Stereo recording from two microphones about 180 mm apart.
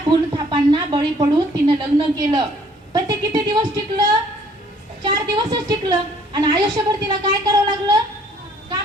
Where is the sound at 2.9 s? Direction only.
20° right (ahead or behind).